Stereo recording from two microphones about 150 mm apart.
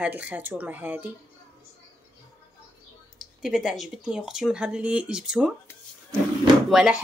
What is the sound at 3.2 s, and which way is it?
Speech, 5° right (ahead or behind).